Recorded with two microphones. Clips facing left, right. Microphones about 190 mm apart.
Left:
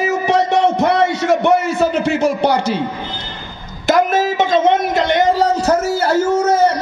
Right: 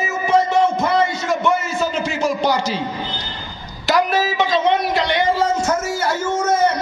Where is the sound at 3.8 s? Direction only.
50° left (ahead or behind).